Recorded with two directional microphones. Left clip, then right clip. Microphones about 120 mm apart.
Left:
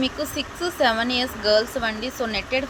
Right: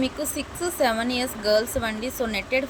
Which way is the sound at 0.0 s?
10° right (ahead or behind).